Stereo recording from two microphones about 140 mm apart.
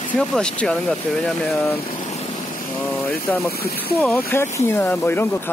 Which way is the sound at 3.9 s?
10° left (ahead or behind).